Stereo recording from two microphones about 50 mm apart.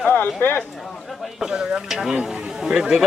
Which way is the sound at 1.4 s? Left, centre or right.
Centre.